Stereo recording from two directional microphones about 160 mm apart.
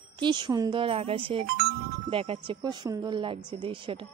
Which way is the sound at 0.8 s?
35° right (ahead or behind).